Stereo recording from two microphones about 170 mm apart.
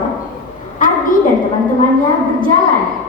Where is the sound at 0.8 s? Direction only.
50° left (ahead or behind).